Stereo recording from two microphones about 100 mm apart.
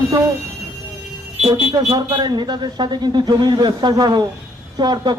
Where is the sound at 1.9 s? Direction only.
45° right (ahead or behind).